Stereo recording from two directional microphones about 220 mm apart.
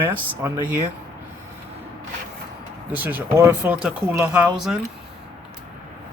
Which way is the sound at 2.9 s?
10° right (ahead or behind).